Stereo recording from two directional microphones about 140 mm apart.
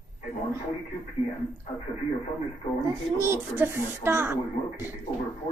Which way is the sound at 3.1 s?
20° right (ahead or behind).